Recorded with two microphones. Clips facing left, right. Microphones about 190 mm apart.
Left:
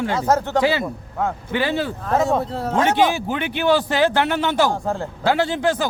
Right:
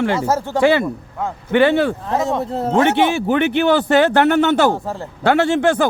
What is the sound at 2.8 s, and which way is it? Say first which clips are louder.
Speech: right 3 dB; 65° right (ahead or behind).